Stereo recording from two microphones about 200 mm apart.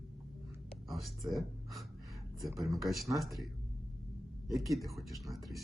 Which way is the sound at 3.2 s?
Centre (ahead or behind).